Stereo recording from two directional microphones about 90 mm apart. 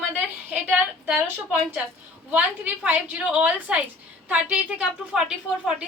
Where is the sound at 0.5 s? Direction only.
15° right (ahead or behind).